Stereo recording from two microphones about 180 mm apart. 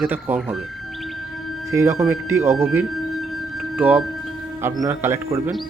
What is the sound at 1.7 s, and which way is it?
Speech, 15° right (ahead or behind).